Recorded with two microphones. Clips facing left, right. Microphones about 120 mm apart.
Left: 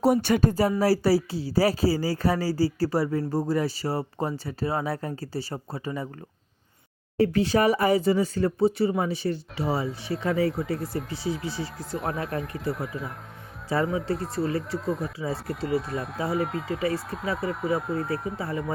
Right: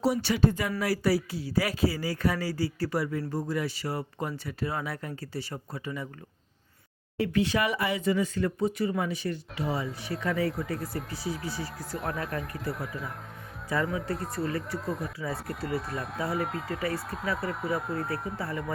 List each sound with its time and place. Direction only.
0.0 s speech: 50° left (ahead or behind)
7.2 s speech: 35° left (ahead or behind)
10.8 s speech: centre (ahead or behind)
13.7 s speech: 30° left (ahead or behind)
14.8 s speech: centre (ahead or behind)